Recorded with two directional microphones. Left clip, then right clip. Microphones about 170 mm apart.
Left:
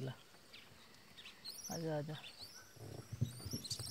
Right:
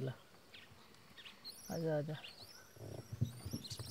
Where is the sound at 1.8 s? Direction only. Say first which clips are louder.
Right 4 dB; 40° right (ahead or behind).